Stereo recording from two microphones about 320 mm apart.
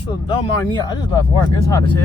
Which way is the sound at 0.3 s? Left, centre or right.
Centre.